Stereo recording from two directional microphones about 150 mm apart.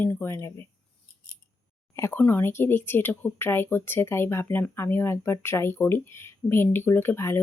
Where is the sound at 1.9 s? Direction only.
15° left (ahead or behind).